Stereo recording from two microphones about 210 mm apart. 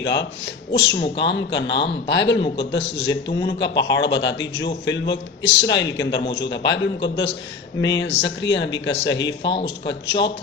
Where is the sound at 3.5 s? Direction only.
55° left (ahead or behind).